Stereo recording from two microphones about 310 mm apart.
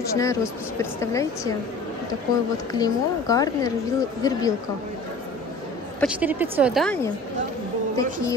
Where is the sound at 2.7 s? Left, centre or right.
Centre.